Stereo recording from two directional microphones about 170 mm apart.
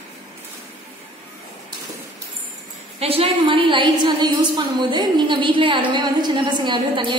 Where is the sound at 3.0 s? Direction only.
35° right (ahead or behind).